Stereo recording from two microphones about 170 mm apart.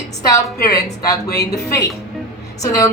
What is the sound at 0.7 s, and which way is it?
Speech, 20° left (ahead or behind).